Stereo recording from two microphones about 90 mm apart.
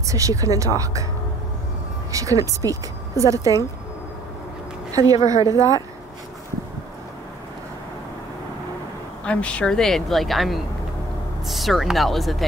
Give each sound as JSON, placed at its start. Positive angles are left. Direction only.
{"t": 0.0, "sound": "speech", "side_deg": -40}
{"t": 2.1, "sound": "speech", "side_deg": -40}
{"t": 4.9, "sound": "speech", "side_deg": -40}
{"t": 9.2, "sound": "speech", "side_deg": 15}